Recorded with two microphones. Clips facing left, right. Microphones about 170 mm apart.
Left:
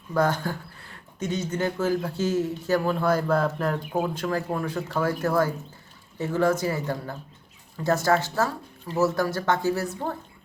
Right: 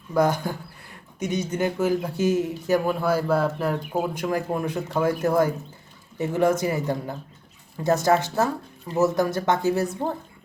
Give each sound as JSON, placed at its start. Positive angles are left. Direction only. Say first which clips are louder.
{"t": 0.1, "sound": "speech", "louder": "right 2 dB", "side_deg": -15}